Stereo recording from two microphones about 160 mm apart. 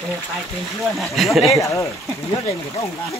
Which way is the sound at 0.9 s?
Centre (ahead or behind).